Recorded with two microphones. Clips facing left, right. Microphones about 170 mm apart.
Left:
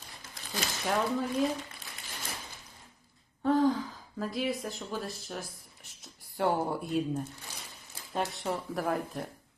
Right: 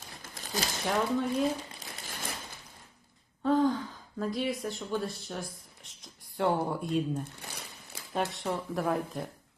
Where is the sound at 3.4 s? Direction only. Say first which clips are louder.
Even; centre (ahead or behind).